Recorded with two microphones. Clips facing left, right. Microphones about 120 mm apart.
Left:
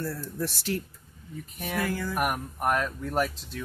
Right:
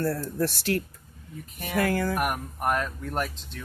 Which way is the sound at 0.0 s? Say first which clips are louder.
Right 6 dB; 60° right (ahead or behind).